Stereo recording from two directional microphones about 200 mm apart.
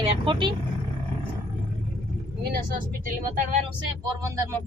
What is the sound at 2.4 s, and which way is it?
Speech, 45° right (ahead or behind).